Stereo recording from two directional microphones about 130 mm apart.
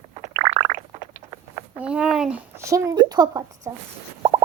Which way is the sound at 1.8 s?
10° right (ahead or behind).